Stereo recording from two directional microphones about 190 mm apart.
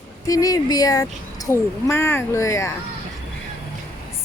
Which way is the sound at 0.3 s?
20° left (ahead or behind).